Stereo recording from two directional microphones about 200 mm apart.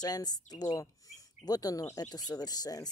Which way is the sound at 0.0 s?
20° left (ahead or behind).